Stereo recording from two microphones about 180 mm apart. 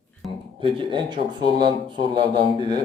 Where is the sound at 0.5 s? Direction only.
25° right (ahead or behind).